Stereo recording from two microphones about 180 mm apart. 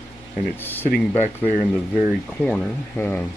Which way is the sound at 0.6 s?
10° left (ahead or behind).